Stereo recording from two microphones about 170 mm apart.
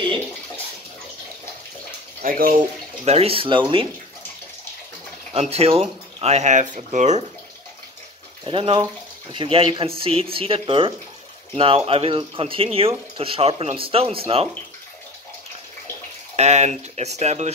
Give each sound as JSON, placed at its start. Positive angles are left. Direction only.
{"t": 2.2, "sound": "speech", "side_deg": -60}
{"t": 3.1, "sound": "speech", "side_deg": -35}
{"t": 5.3, "sound": "speech", "side_deg": -35}
{"t": 8.5, "sound": "speech", "side_deg": -30}
{"t": 16.3, "sound": "speech", "side_deg": -40}